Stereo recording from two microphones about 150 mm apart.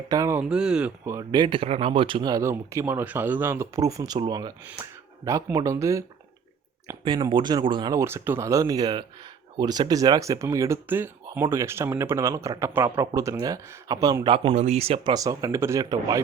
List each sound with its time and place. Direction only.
0.1 s speech: 20° right (ahead or behind)
1.1 s speech: 25° right (ahead or behind)
14.3 s speech: 45° right (ahead or behind)
15.1 s speech: 25° right (ahead or behind)